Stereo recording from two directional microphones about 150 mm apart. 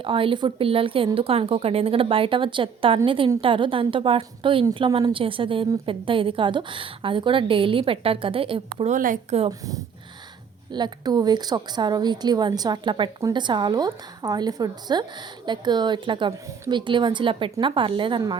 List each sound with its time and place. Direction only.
0.0 s speech: 35° right (ahead or behind)
8.8 s a woman's voice: 60° right (ahead or behind)
9.5 s a woman's voice: 25° right (ahead or behind)